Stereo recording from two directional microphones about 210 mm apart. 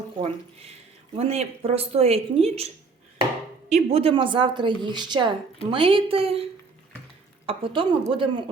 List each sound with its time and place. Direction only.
0.2 s a woman's voice: 30° right (ahead or behind)